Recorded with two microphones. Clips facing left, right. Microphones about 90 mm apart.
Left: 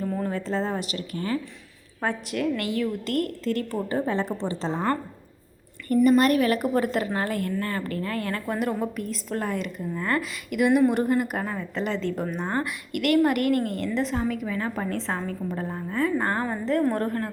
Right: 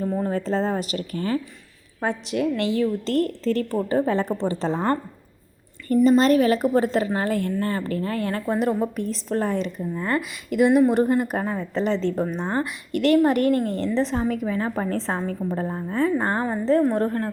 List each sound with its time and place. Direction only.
0.0 s a sound: 20° right (ahead or behind)
0.3 s a woman's voice: 35° right (ahead or behind)
2.0 s a woman's voice: 20° right (ahead or behind); by 4.9 s 35° right (ahead or behind)
5.9 s a woman's voice: 25° right (ahead or behind)